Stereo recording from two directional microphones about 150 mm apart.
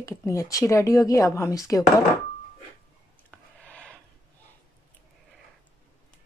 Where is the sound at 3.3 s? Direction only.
10° left (ahead or behind).